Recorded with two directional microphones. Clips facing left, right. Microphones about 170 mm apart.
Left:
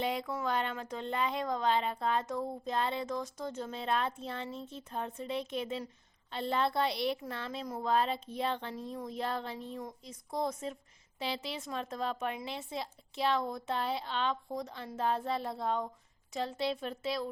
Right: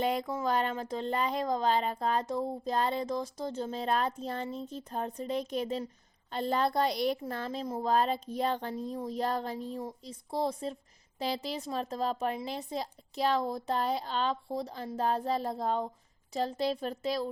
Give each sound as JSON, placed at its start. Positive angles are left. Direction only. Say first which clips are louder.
{"t": 0.0, "sound": "a woman's voice", "louder": "right 4 dB", "side_deg": -45}